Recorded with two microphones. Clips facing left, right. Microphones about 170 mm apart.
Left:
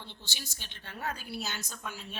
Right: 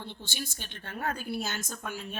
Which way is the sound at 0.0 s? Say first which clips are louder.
Right 7 dB; 50° right (ahead or behind).